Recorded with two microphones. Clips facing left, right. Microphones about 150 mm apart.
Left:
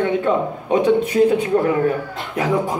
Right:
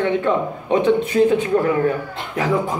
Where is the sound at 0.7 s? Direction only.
10° left (ahead or behind).